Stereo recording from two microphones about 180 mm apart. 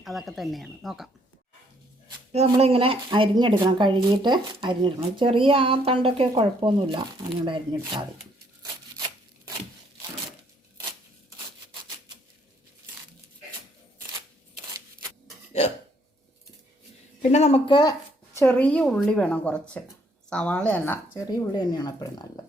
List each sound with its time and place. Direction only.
0.0 s speech: centre (ahead or behind)
2.3 s a woman's voice: 35° right (ahead or behind)
17.3 s speech: 35° left (ahead or behind)
18.3 s a woman's voice: 10° left (ahead or behind)
21.2 s speech: 20° left (ahead or behind)